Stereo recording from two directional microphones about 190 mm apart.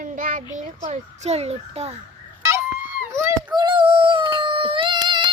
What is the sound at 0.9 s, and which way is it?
A child's voice, 35° right (ahead or behind).